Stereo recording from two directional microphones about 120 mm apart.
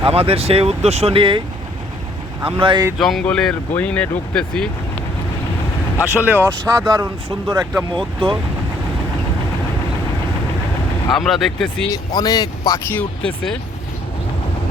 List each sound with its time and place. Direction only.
0.0 s speech: 55° right (ahead or behind)
2.6 s speech: 45° right (ahead or behind)
3.0 s speech: 5° left (ahead or behind)
6.2 s speech: 15° right (ahead or behind)
7.9 s speech: 40° right (ahead or behind)
11.1 s speech: centre (ahead or behind)
11.9 s speech: 30° left (ahead or behind)
12.9 s speech: 10° left (ahead or behind)